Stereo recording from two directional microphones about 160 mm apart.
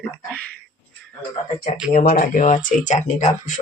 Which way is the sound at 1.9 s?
60° left (ahead or behind).